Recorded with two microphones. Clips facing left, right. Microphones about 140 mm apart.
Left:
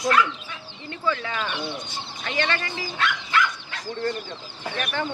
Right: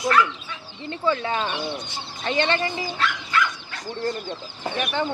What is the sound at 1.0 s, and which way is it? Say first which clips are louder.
Speech: right 3 dB; 30° right (ahead or behind).